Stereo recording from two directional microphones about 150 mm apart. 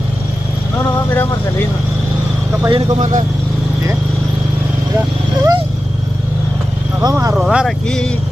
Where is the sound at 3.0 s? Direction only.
55° right (ahead or behind).